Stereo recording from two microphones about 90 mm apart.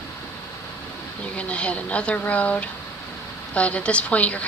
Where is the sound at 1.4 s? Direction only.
15° left (ahead or behind).